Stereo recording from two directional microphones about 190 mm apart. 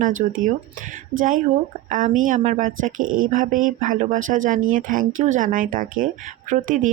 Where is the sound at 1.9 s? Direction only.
45° right (ahead or behind).